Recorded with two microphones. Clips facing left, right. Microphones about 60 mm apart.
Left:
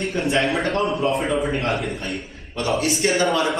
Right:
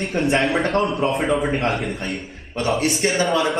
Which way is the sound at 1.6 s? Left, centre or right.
Centre.